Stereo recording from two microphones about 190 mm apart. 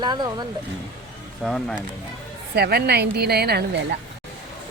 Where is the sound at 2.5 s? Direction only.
55° right (ahead or behind).